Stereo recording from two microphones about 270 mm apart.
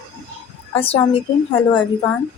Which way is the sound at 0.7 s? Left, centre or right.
Left.